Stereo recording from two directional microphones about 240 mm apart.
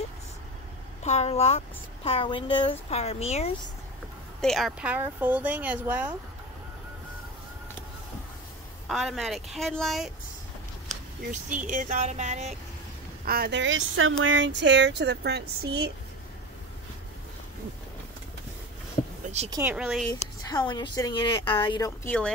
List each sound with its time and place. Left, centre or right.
1.0 s speech: left
4.4 s speech: centre
8.8 s a woman's voice: centre
11.6 s speech: right
13.2 s speech: right
19.2 s a sound: right
19.5 s a woman's voice: centre
20.1 s a woman's voice: centre